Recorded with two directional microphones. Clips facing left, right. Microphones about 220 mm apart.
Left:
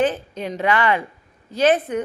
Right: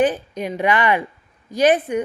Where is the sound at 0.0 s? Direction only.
15° right (ahead or behind).